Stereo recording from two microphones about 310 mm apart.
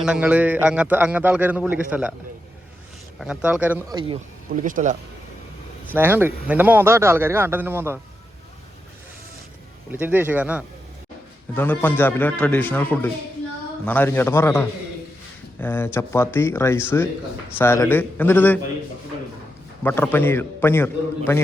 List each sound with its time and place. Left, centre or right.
0.0 s a man's voice: centre
3.2 s speech: centre; by 4.9 s right
5.9 s speech: centre
9.9 s a man's voice: centre
11.5 s a man's voice: centre
19.8 s a man's voice: centre